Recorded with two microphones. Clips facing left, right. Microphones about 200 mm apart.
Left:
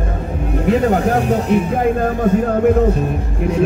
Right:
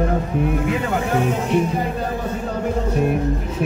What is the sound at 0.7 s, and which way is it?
Speech, 40° left (ahead or behind).